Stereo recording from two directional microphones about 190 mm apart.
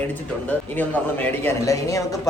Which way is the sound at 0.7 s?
10° left (ahead or behind).